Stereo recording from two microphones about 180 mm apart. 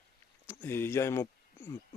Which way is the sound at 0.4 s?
15° left (ahead or behind).